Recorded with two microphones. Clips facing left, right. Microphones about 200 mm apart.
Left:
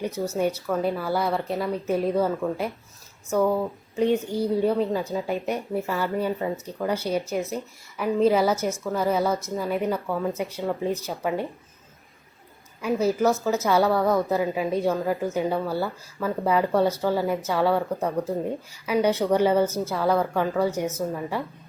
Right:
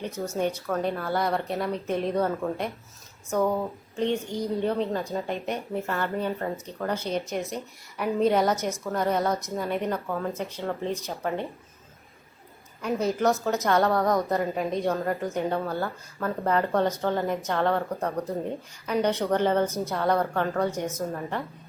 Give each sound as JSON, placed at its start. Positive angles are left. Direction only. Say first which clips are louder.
{"t": 0.3, "sound": "a woman's voice", "louder": "left 1 dB", "side_deg": 10}
{"t": 3.9, "sound": "a woman's voice", "louder": "left 5 dB", "side_deg": 10}
{"t": 12.8, "sound": "a woman's voice", "louder": "left 3 dB", "side_deg": 5}